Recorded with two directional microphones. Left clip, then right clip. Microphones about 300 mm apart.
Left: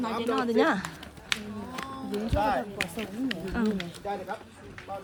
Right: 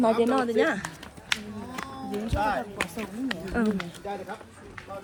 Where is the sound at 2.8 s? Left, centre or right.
Centre.